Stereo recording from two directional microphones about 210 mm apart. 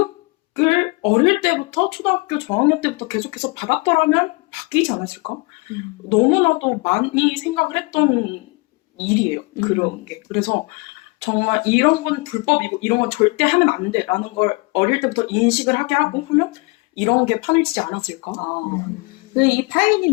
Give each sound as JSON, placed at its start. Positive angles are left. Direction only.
{"t": 0.5, "sound": "speech", "side_deg": 30}